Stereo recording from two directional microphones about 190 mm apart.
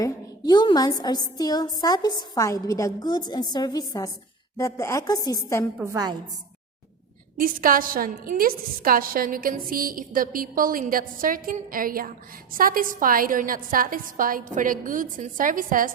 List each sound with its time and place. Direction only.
0.0 s a woman's voice: 25° left (ahead or behind)
5.7 s a woman's voice: 15° right (ahead or behind)
7.3 s a woman's voice: 50° right (ahead or behind)